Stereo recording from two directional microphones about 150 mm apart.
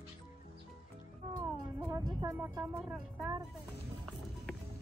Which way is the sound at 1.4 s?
20° right (ahead or behind).